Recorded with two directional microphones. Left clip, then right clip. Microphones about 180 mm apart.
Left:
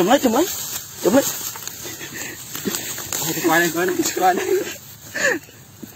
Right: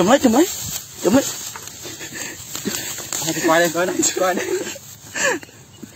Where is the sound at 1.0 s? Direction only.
20° right (ahead or behind).